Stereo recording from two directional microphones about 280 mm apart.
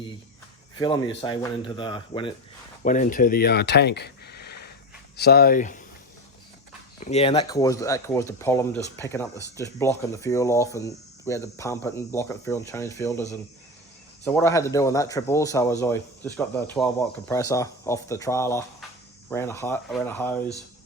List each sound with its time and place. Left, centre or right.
0.8 s speech: centre
2.8 s speech: left
7.0 s speech: left
14.3 s speech: centre